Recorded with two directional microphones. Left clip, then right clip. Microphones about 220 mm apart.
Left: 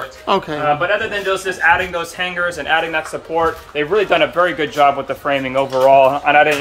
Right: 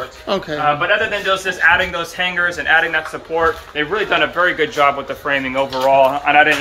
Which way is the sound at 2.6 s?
50° left (ahead or behind).